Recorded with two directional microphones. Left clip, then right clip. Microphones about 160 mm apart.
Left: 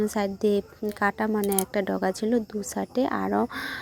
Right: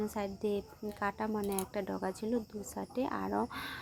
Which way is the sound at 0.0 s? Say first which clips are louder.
Left 11 dB; 35° left (ahead or behind).